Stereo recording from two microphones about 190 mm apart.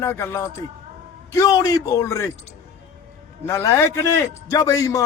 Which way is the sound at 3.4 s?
15° left (ahead or behind).